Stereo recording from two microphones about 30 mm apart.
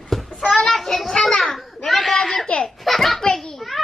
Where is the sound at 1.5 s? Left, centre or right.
Centre.